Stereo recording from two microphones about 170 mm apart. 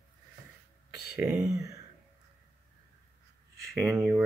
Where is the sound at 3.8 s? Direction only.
10° right (ahead or behind).